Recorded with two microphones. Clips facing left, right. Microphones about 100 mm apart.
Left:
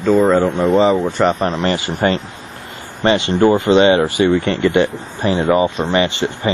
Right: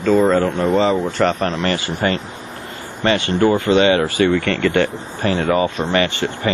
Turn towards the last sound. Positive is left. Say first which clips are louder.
# left 2 dB
turn(degrees=20)  # may be behind; listen again after turning